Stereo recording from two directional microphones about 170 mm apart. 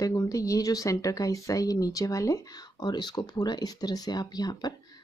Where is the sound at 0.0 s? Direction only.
20° left (ahead or behind).